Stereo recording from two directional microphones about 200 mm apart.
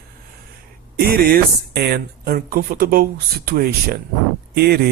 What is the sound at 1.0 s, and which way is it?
Speech, 50° right (ahead or behind).